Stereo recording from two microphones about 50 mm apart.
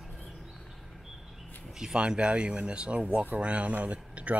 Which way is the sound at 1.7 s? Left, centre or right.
Centre.